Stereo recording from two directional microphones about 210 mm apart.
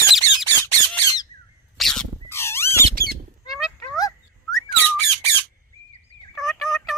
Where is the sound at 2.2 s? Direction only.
10° left (ahead or behind).